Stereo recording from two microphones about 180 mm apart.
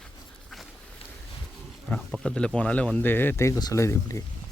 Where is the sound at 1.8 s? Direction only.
5° left (ahead or behind).